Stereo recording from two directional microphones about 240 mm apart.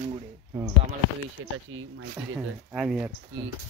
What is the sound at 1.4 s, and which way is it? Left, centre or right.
Speech, right.